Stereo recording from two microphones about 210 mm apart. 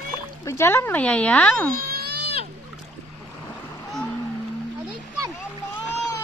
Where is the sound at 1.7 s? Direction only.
45° right (ahead or behind).